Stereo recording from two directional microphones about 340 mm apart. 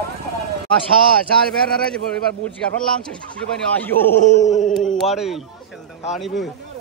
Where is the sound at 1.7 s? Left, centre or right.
Centre.